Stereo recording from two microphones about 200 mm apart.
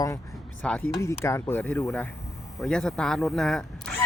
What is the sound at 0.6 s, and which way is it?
Speech, 5° left (ahead or behind).